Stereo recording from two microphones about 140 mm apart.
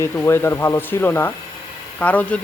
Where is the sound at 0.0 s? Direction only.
20° left (ahead or behind).